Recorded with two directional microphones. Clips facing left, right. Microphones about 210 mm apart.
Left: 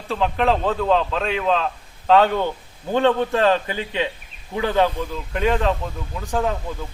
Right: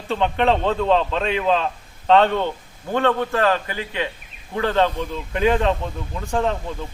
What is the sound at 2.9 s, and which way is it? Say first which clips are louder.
A man's voice: left 2 dB; 15° left (ahead or behind).